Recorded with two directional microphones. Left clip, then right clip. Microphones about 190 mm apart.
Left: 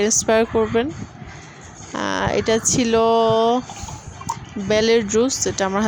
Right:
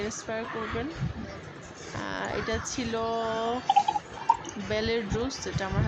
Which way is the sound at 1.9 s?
50° left (ahead or behind).